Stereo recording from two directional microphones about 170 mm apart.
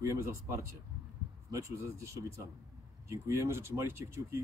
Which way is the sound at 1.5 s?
15° right (ahead or behind).